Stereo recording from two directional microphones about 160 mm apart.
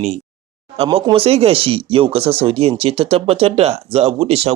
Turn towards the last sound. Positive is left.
turn(degrees=-40)  # may be behind; listen again after turning